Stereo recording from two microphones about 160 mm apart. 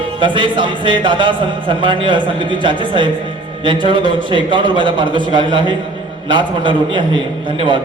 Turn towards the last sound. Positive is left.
turn(degrees=-30)  # may be behind; listen again after turning